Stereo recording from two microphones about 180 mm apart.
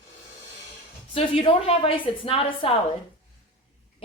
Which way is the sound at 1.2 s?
30° left (ahead or behind).